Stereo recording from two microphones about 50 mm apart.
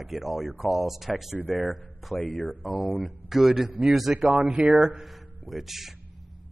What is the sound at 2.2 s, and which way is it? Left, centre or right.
Speech, left.